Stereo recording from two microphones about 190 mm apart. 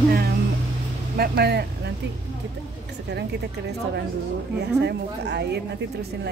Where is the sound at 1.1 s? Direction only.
55° right (ahead or behind).